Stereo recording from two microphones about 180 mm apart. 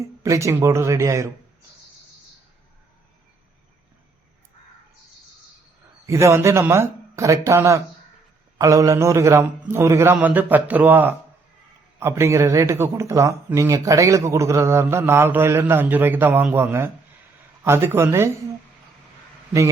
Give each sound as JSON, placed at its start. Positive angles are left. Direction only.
{"t": 0.0, "sound": "speech", "side_deg": -15}
{"t": 6.1, "sound": "speech", "side_deg": -15}